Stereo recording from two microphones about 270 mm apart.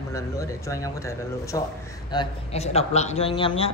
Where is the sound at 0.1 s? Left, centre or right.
Centre.